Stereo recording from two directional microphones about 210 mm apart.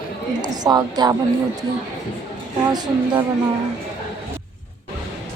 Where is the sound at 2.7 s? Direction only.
20° right (ahead or behind).